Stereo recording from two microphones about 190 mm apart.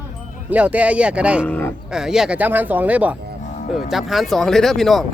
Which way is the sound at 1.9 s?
5° right (ahead or behind).